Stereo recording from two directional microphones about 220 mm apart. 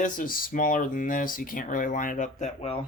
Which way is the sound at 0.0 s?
40° left (ahead or behind).